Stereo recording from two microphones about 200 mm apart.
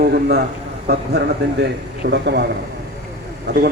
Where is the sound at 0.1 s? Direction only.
55° right (ahead or behind).